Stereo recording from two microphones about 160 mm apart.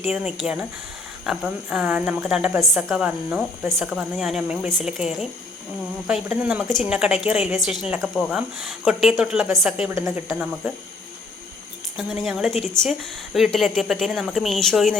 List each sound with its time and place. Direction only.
0.1 s a woman's voice: 5° right (ahead or behind)
9.9 s speech: 20° right (ahead or behind)
11.9 s a woman's voice: centre (ahead or behind)